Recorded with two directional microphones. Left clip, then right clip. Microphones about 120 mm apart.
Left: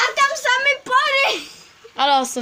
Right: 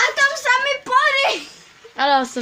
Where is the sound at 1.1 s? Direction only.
25° left (ahead or behind).